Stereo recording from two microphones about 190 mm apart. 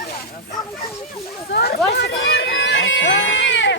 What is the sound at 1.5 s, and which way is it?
Speech, 60° left (ahead or behind).